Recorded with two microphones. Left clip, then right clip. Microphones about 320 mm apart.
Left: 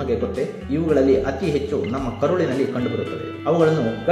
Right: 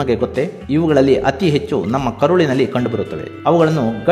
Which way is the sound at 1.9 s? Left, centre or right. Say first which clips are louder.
Right 10 dB; right.